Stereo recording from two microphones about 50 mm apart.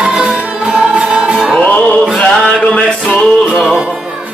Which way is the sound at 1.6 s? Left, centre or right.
Left.